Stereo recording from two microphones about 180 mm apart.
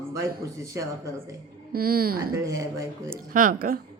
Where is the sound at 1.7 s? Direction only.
55° right (ahead or behind).